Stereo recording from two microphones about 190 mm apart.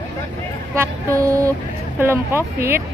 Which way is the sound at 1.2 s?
15° right (ahead or behind).